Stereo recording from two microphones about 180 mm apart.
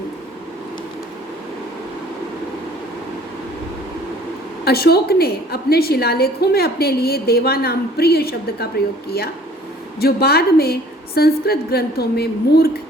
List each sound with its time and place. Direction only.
4.6 s a woman's voice: 60° left (ahead or behind)
10.0 s a woman's voice: 60° left (ahead or behind)